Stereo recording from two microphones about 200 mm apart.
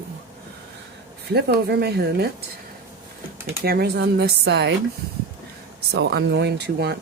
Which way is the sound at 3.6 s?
50° right (ahead or behind).